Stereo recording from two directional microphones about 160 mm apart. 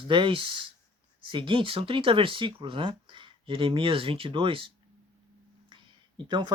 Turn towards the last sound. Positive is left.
turn(degrees=-30)  # may be behind; listen again after turning